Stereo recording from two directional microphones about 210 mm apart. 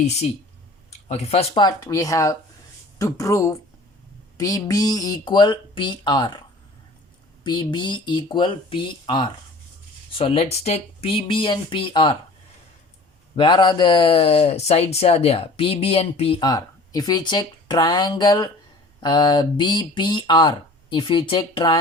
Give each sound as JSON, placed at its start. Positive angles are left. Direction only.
{"t": 0.9, "sound": "speech", "side_deg": 30}
{"t": 7.4, "sound": "speech", "side_deg": 20}
{"t": 13.3, "sound": "speech", "side_deg": 20}